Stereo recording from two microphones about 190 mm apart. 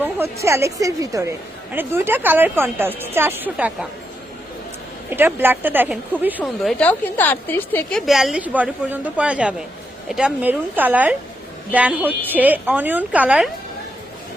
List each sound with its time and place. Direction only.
0.0 s speech: 15° right (ahead or behind)
5.1 s a woman's voice: 10° right (ahead or behind)